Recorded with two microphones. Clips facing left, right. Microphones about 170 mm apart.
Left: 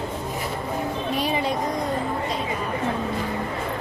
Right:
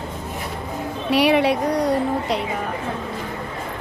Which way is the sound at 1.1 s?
80° right.